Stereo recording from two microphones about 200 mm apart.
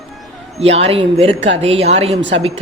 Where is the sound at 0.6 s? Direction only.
30° right (ahead or behind).